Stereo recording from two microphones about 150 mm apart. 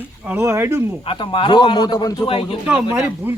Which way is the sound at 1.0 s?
35° left (ahead or behind).